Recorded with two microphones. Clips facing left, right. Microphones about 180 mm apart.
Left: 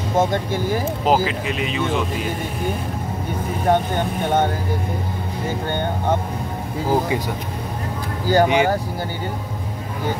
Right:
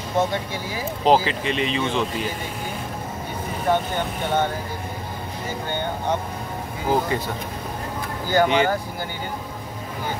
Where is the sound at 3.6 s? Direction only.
50° left (ahead or behind).